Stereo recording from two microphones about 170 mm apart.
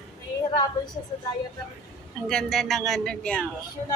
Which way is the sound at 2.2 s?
Centre (ahead or behind).